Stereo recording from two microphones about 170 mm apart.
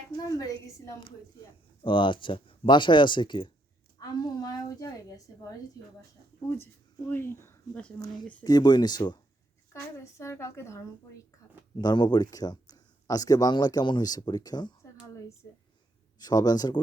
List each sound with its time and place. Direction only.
0.3 s speech: 20° left (ahead or behind)
7.1 s speech: 15° left (ahead or behind)
7.9 s speech: 25° left (ahead or behind)
16.1 s speech: 25° left (ahead or behind)